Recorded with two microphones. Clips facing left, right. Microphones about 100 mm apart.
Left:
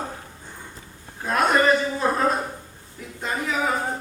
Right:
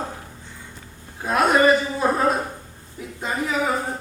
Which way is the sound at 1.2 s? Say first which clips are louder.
Right 2 dB; 5° right (ahead or behind).